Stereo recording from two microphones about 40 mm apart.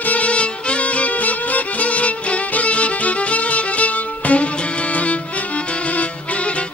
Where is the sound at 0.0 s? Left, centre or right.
Left.